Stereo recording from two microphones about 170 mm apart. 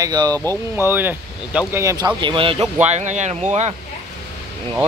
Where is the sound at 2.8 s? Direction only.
45° right (ahead or behind).